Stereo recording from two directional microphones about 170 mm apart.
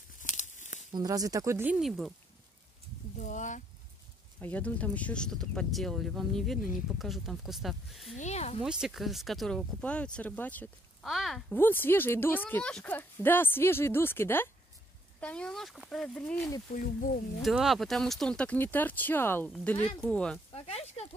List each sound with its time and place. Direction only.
0.2 s tearing: 45° left (ahead or behind)
0.9 s speech: 20° right (ahead or behind)
1.8 s speech: centre (ahead or behind)
3.2 s speech: 45° left (ahead or behind)
4.4 s speech: 10° left (ahead or behind)
8.2 s speech: 40° left (ahead or behind)
8.6 s speech: 5° right (ahead or behind)
11.5 s speech: 10° left (ahead or behind)
16.7 s speech: 50° left (ahead or behind)
17.4 s speech: centre (ahead or behind)
20.5 s a sound: 35° left (ahead or behind)